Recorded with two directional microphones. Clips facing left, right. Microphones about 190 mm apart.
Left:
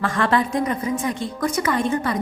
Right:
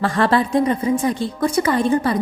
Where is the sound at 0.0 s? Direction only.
30° right (ahead or behind).